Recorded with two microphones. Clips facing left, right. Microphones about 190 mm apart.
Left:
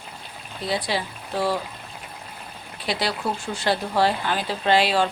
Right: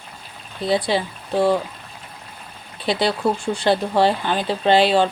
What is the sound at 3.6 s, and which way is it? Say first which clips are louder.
Speech: right 4 dB; 25° right (ahead or behind).